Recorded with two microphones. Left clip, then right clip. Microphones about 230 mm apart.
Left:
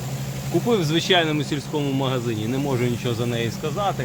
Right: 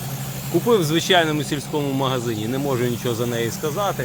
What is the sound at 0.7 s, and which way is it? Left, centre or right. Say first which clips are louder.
Speech: right 3 dB; centre.